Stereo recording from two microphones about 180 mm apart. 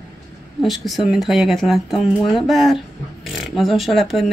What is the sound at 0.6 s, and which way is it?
Speech, centre (ahead or behind).